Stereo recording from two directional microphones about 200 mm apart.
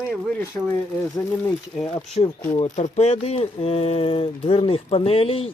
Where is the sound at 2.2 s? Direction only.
30° left (ahead or behind).